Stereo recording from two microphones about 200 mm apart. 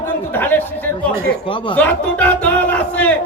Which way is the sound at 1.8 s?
10° left (ahead or behind).